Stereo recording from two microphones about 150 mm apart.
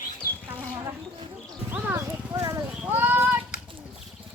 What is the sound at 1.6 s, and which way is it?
Horse, 10° right (ahead or behind).